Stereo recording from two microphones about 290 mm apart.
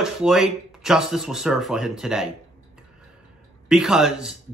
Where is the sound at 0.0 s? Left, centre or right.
Centre.